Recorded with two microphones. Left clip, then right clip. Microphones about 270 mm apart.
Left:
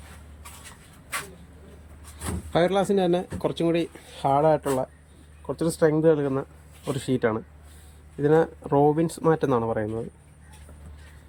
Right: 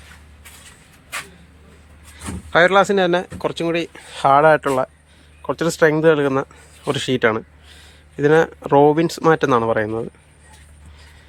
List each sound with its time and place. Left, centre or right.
2.5 s speech: centre
4.4 s speech: right